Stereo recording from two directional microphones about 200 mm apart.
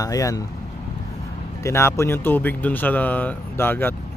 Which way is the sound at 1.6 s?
15° left (ahead or behind).